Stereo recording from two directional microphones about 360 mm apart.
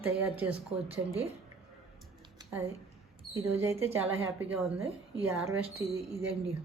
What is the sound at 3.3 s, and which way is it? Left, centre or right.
Speech, centre.